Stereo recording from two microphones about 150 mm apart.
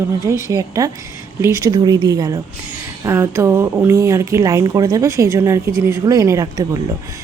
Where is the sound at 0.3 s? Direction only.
20° right (ahead or behind).